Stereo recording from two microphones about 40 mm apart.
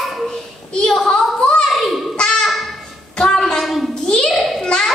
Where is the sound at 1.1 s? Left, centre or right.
Left.